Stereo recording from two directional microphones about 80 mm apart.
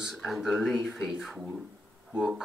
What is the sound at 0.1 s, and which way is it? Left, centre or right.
Speech, centre.